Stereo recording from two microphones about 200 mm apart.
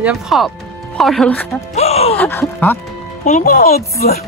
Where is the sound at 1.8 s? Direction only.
30° left (ahead or behind).